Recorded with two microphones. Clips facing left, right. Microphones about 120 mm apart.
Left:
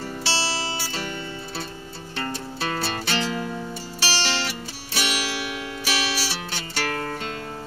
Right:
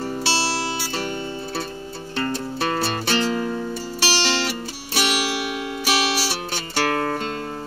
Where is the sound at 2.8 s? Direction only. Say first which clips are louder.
Right 3 dB; 40° right (ahead or behind).